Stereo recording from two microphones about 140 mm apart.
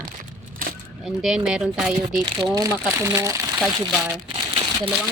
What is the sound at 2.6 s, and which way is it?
Speech, 15° right (ahead or behind).